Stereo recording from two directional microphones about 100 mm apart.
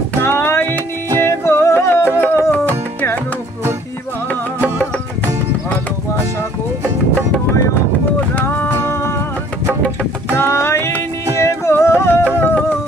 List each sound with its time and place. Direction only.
0.2 s music: 25° left (ahead or behind)
8.4 s music: 20° left (ahead or behind)
10.3 s music: 25° left (ahead or behind)